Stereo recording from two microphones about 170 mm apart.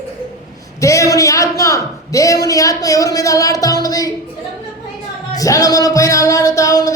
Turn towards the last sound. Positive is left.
turn(degrees=20)  # may be behind; listen again after turning